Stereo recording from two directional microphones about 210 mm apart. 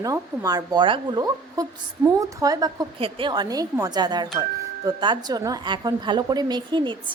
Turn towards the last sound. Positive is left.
turn(degrees=-20)  # may be behind; listen again after turning